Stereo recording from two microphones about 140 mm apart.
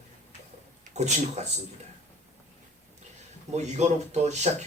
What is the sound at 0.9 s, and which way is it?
Speech, 55° right (ahead or behind).